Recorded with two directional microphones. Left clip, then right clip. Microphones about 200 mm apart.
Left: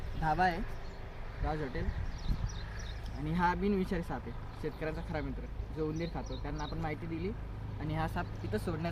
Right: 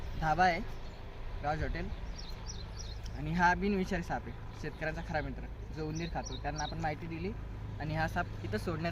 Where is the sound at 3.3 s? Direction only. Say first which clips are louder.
Right 2 dB; 25° right (ahead or behind).